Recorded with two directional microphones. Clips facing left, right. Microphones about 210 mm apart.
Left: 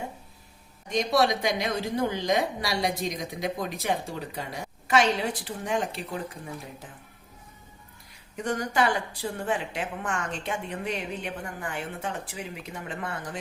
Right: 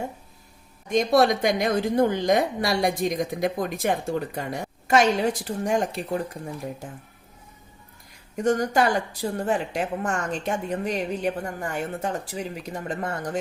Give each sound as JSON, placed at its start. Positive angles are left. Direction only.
{"t": 0.9, "sound": "a woman's voice", "side_deg": -50}
{"t": 8.4, "sound": "a woman's voice", "side_deg": -40}